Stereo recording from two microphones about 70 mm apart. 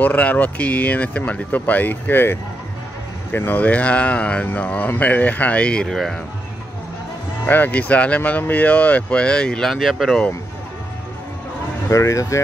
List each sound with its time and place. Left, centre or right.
0.0 s speech: left; by 6.1 s centre
7.4 s speech: left; by 10.2 s centre
11.9 s speech: left